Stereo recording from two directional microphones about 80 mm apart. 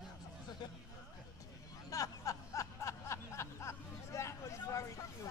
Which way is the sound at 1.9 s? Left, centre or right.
Left.